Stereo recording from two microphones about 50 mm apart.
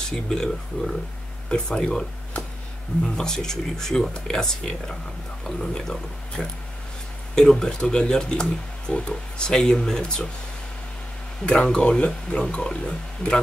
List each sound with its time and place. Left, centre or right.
0.1 s speech: centre
11.4 s speech: centre